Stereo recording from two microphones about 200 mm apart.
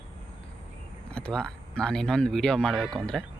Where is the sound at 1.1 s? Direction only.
5° left (ahead or behind).